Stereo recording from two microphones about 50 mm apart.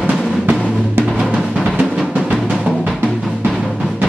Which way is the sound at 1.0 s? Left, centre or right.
Right.